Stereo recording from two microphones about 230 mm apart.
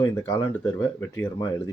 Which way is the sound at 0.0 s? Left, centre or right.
Centre.